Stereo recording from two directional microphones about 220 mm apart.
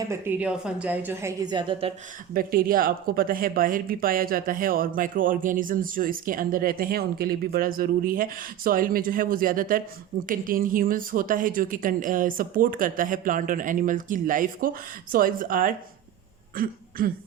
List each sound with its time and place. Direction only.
0.1 s a woman's voice: 10° right (ahead or behind)
2.3 s speech: 40° right (ahead or behind)